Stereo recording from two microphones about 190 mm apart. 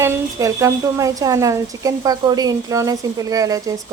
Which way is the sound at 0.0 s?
15° right (ahead or behind).